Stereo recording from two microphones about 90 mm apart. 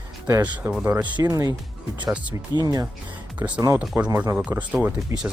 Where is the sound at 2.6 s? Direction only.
45° right (ahead or behind).